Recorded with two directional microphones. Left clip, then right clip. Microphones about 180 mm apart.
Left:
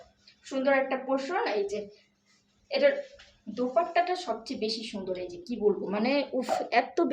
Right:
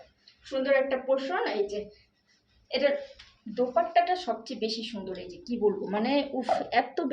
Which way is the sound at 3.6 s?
25° left (ahead or behind).